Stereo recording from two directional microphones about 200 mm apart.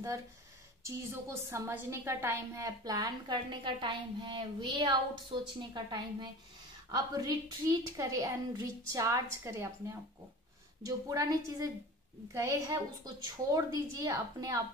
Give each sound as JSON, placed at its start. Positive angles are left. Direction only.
{"t": 1.5, "sound": "a woman's voice", "side_deg": -15}